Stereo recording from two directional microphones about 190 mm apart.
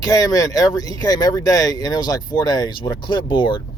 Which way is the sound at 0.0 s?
20° left (ahead or behind).